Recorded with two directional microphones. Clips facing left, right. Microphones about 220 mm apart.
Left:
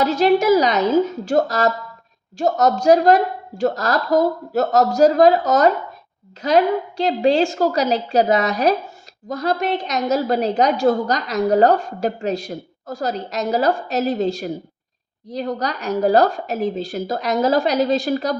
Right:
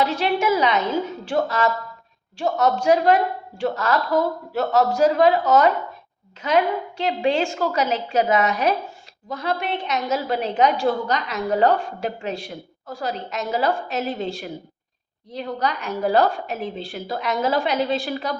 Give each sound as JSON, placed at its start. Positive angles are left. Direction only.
{"t": 0.0, "sound": "a woman's voice", "side_deg": 40}